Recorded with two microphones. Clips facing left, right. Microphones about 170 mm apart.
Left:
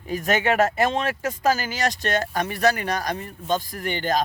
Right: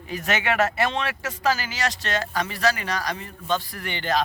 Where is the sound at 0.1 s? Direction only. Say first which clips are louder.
Left 3 dB; 45° left (ahead or behind).